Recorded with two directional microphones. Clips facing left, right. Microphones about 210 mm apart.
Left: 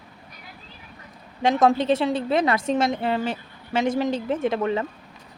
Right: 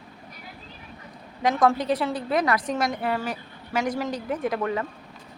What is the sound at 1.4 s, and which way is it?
A woman's voice, 25° left (ahead or behind).